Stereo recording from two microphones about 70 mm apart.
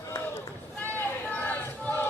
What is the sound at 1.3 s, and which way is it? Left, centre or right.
Choir, left.